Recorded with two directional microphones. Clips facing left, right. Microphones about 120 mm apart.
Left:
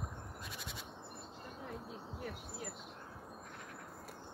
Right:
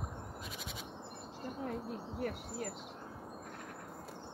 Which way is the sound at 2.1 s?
60° right (ahead or behind).